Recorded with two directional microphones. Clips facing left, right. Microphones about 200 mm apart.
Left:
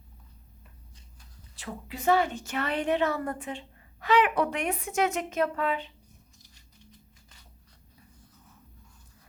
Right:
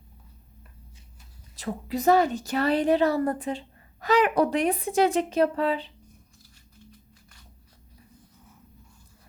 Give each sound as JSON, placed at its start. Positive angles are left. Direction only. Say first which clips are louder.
{"t": 1.5, "sound": "a woman's voice", "louder": "right 9 dB", "side_deg": -40}